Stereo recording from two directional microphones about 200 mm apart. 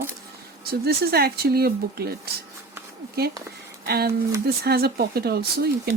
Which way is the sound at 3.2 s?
50° right (ahead or behind).